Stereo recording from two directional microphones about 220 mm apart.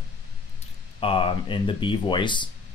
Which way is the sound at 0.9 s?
25° left (ahead or behind).